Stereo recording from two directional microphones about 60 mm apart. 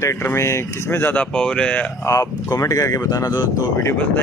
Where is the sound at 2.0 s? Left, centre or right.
Left.